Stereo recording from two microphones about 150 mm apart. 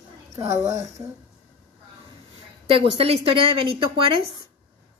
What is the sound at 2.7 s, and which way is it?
Speech, 40° right (ahead or behind).